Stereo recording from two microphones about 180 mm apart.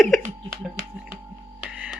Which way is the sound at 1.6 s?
5° right (ahead or behind).